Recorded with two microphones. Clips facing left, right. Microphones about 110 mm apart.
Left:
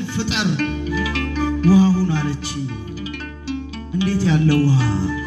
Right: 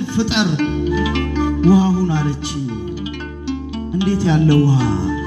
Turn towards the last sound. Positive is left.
turn(degrees=-20)  # may be behind; listen again after turning